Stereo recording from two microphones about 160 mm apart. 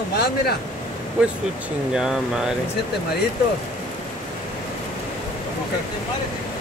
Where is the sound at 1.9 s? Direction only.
5° right (ahead or behind).